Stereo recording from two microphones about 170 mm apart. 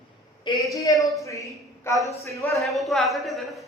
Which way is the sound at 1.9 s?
15° left (ahead or behind).